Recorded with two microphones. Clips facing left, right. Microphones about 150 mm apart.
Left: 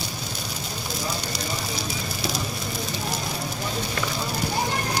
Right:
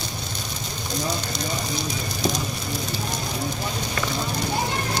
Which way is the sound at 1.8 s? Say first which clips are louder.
Right 3 dB; 5° left (ahead or behind).